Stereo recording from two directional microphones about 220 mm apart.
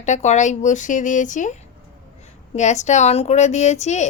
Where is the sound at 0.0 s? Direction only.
30° left (ahead or behind).